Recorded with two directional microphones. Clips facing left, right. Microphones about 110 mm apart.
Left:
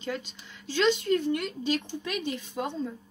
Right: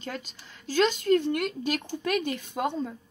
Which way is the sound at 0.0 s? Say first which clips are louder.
Left 3 dB; 45° right (ahead or behind).